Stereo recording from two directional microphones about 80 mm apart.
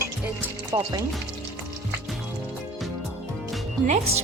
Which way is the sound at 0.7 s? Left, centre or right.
Right.